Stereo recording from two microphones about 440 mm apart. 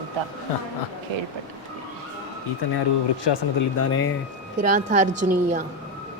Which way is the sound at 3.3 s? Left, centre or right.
Left.